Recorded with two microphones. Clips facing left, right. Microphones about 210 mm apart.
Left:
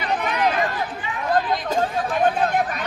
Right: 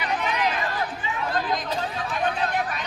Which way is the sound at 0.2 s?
55° left (ahead or behind).